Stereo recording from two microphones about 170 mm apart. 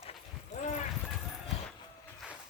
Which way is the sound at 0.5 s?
40° left (ahead or behind).